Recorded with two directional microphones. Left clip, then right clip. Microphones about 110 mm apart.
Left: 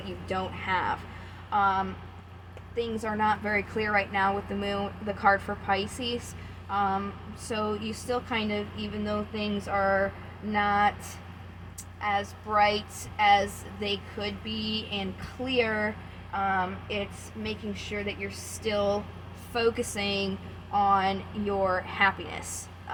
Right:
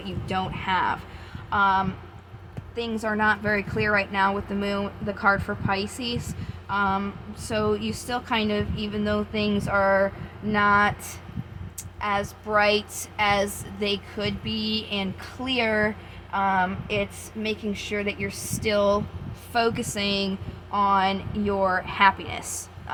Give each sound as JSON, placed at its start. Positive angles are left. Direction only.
{"t": 0.0, "sound": "speech", "side_deg": -60}
{"t": 2.7, "sound": "a woman's voice", "side_deg": -50}
{"t": 6.7, "sound": "speech", "side_deg": -60}
{"t": 9.0, "sound": "a sound", "side_deg": -70}
{"t": 10.5, "sound": "speech", "side_deg": -90}
{"t": 11.9, "sound": "a woman's voice", "side_deg": -80}
{"t": 19.5, "sound": "speech", "side_deg": -60}